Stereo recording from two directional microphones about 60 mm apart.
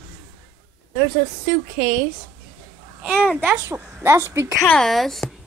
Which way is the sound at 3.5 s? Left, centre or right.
Right.